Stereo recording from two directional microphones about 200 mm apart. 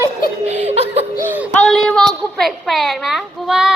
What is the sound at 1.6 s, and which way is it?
A child's voice, centre (ahead or behind).